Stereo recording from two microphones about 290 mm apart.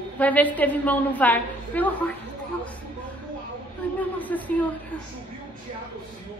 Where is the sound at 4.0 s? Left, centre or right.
Centre.